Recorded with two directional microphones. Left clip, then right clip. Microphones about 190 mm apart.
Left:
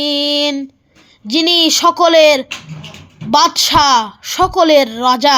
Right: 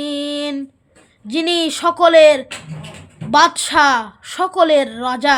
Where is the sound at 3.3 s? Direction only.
15° left (ahead or behind).